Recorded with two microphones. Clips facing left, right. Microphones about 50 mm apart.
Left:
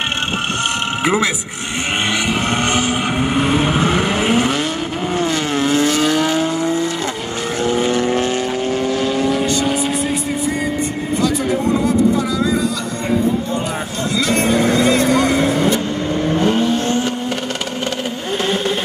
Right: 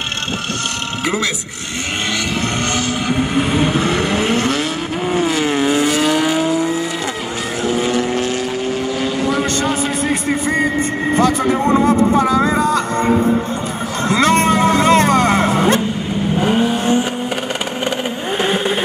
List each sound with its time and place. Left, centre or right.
1.0 s speech: centre
2.6 s vehicle: left
3.3 s vehicle: centre
5.1 s vehicle: centre
10.0 s vehicle: right
16.3 s vehicle: centre
18.4 s vehicle: centre